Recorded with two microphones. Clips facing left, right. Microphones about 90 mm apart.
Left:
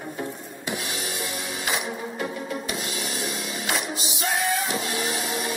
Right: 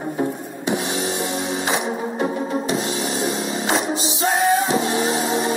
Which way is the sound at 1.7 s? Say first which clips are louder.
Right 3 dB; 25° right (ahead or behind).